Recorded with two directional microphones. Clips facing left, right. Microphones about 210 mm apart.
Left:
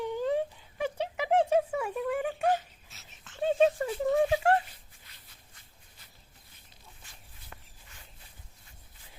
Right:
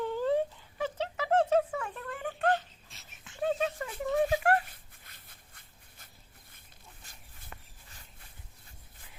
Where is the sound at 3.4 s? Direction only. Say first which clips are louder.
Left 6 dB; 25° left (ahead or behind).